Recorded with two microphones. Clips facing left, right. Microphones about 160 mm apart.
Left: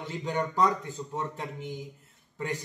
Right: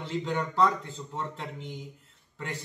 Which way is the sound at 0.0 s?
15° left (ahead or behind).